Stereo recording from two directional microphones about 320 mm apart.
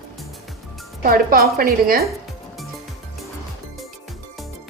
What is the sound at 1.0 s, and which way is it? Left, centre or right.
A woman's voice, right.